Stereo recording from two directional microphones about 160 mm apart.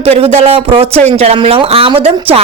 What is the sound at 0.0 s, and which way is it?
A woman's voice, 40° right (ahead or behind).